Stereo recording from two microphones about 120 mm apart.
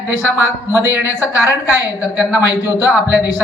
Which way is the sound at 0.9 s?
15° right (ahead or behind).